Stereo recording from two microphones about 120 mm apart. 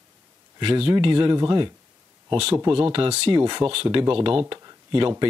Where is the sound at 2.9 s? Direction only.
55° right (ahead or behind).